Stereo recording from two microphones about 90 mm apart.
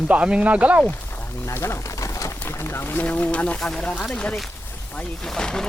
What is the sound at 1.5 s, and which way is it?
Pigeon, 30° left (ahead or behind).